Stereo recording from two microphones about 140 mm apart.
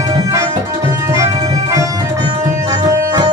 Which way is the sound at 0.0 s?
25° right (ahead or behind).